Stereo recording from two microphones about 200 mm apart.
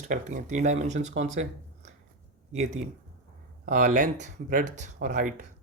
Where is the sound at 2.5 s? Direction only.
35° right (ahead or behind).